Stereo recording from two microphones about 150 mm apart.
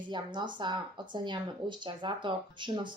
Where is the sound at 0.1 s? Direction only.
30° right (ahead or behind).